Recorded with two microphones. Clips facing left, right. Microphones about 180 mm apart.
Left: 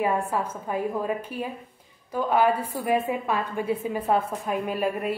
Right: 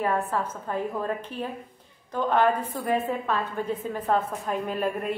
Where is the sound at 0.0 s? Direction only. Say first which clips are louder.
Left 1 dB; 10° left (ahead or behind).